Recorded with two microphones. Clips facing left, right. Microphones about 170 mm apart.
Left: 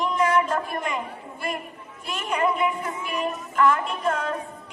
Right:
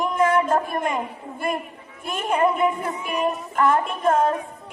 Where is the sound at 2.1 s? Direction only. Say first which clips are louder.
Right 4 dB; 50° right (ahead or behind).